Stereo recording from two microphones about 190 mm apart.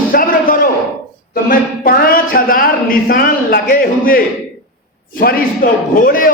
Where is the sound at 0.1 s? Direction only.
50° left (ahead or behind).